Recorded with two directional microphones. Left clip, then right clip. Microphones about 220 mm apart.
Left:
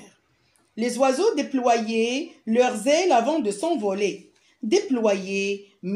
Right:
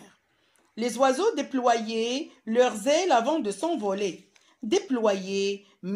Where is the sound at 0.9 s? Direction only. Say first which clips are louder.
Left 2 dB; 30° right (ahead or behind).